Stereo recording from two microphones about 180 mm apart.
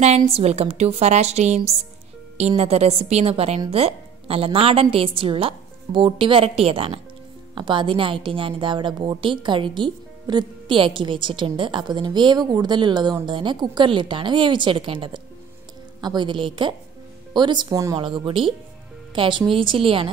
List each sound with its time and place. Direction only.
0.3 s a woman's voice: 35° right (ahead or behind)